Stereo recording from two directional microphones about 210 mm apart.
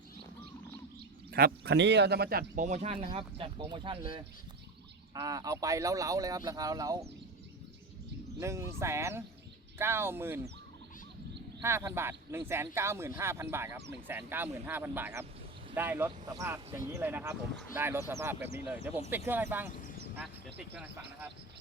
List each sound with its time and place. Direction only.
1.3 s speech: 45° right (ahead or behind)
2.6 s speech: 35° right (ahead or behind); by 7.1 s 15° right (ahead or behind)
8.4 s speech: 15° right (ahead or behind)
11.6 s speech: 10° right (ahead or behind)
19.7 s a sound: 40° left (ahead or behind)
20.1 s speech: 5° right (ahead or behind)